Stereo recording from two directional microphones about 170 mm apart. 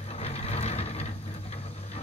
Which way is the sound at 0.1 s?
40° left (ahead or behind).